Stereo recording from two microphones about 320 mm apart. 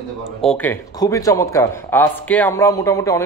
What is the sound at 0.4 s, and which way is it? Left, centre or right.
Speech, centre.